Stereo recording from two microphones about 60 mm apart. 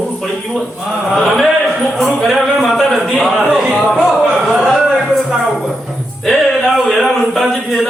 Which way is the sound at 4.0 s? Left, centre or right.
Centre.